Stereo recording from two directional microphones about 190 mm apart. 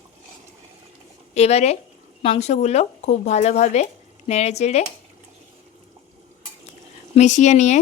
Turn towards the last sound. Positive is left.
turn(degrees=40)  # may be behind; listen again after turning